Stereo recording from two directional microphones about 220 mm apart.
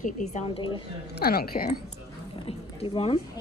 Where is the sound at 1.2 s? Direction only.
45° left (ahead or behind).